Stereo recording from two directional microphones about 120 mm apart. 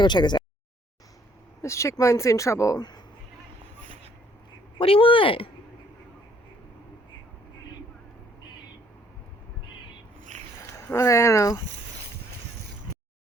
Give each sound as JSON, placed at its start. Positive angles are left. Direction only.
{"t": 0.0, "sound": "a sound", "side_deg": 40}
{"t": 1.6, "sound": "speech", "side_deg": 25}
{"t": 4.8, "sound": "speech", "side_deg": 50}
{"t": 10.7, "sound": "speech", "side_deg": 25}